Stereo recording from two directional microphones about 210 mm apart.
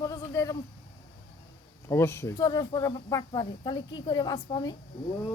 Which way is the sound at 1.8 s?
10° left (ahead or behind).